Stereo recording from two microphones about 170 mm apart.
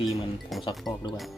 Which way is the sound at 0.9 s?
25° left (ahead or behind).